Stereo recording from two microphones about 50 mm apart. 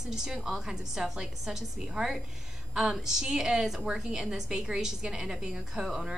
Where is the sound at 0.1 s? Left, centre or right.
Centre.